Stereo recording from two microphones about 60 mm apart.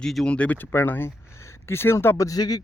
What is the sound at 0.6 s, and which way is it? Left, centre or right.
Speech, left.